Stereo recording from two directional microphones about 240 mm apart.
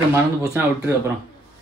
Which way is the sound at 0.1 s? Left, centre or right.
Centre.